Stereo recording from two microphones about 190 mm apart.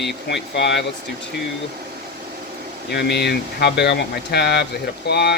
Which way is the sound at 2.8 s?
60° left (ahead or behind).